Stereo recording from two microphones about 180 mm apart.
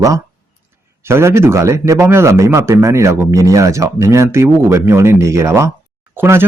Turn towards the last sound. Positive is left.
turn(degrees=-10)  # may be behind; listen again after turning